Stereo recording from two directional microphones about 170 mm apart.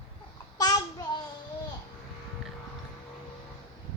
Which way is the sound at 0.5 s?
20° left (ahead or behind).